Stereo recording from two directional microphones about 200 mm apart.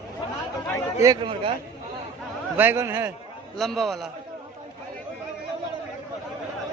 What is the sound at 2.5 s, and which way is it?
Speech, 10° right (ahead or behind).